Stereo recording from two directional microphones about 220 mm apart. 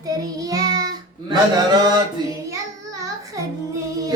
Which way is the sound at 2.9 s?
15° right (ahead or behind).